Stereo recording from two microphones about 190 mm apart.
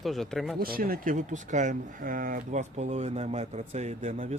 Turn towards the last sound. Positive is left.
turn(degrees=-40)  # may be behind; listen again after turning